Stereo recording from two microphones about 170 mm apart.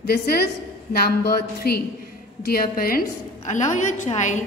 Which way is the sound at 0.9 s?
65° left (ahead or behind).